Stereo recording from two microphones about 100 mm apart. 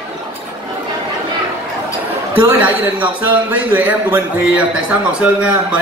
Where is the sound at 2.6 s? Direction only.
15° right (ahead or behind).